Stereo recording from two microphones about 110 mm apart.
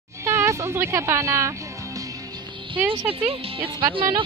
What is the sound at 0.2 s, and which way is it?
Music, 25° right (ahead or behind).